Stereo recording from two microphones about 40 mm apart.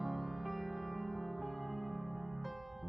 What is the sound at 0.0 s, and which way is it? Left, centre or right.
Music, centre.